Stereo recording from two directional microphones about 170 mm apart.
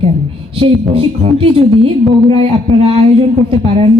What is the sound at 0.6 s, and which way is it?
Speech, 35° right (ahead or behind).